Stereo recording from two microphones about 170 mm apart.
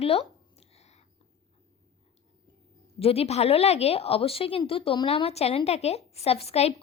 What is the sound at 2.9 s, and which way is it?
A woman's voice, 35° left (ahead or behind).